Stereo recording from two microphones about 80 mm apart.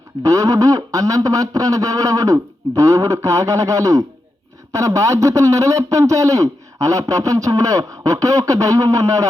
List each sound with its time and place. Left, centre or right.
0.2 s a man's voice: right